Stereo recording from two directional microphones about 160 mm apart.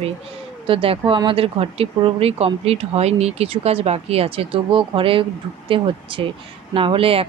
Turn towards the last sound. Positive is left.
turn(degrees=-35)  # may be behind; listen again after turning